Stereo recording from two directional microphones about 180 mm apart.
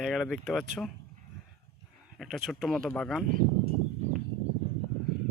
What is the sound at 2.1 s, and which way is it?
Speech, centre (ahead or behind).